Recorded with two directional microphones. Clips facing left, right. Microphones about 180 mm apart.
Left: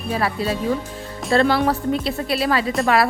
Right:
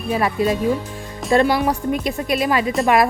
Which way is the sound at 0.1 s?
15° right (ahead or behind).